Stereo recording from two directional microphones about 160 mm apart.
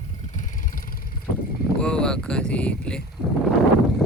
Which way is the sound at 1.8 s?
5° left (ahead or behind).